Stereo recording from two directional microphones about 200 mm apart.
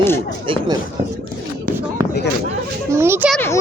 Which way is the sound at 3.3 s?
10° left (ahead or behind).